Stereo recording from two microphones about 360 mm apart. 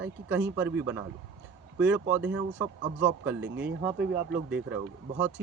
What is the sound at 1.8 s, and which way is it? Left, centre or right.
Speech, centre.